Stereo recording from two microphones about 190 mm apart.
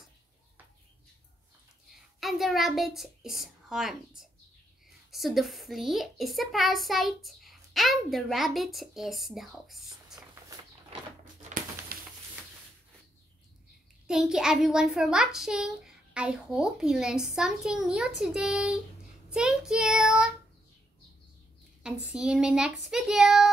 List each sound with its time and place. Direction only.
2.1 s a child's voice: centre (ahead or behind)
11.4 s a sound: 45° right (ahead or behind)
14.0 s a child's voice: 5° right (ahead or behind)
21.8 s a child's voice: 5° right (ahead or behind)